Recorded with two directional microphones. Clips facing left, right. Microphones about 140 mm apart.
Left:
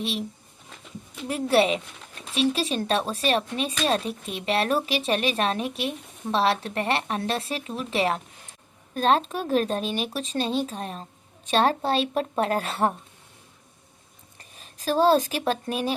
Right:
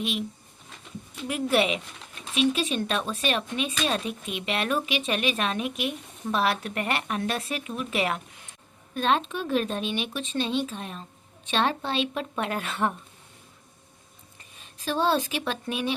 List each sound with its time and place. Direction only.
0.0 s speech: 35° left (ahead or behind)
1.3 s speech: 35° left (ahead or behind)
14.6 s speech: 40° left (ahead or behind)